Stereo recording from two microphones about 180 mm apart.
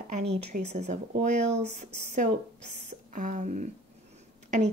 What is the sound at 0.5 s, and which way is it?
Speech, 55° right (ahead or behind).